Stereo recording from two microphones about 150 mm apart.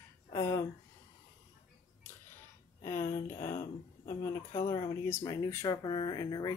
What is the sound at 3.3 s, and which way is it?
Speech, 70° left (ahead or behind).